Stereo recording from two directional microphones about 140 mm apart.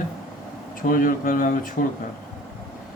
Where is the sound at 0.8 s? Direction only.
85° left.